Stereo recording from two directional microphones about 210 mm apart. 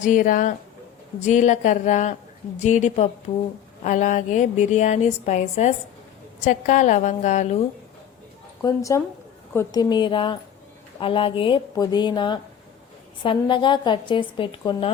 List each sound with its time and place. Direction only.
0.0 s a woman's voice: 40° left (ahead or behind)
8.6 s a woman's voice: 15° left (ahead or behind)